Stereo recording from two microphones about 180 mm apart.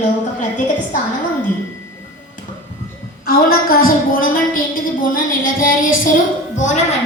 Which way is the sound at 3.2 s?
55° left (ahead or behind).